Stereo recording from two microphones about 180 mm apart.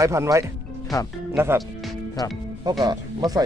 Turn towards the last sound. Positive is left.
turn(degrees=-20)  # may be behind; listen again after turning